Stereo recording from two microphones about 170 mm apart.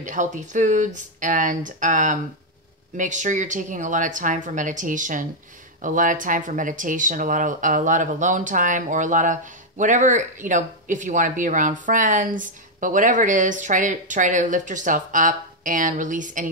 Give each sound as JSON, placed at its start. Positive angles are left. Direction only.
{"t": 0.0, "sound": "speech", "side_deg": -50}